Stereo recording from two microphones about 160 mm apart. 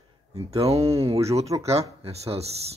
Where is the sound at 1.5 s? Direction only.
25° right (ahead or behind).